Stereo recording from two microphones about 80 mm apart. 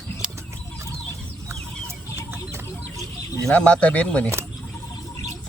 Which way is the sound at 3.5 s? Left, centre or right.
Centre.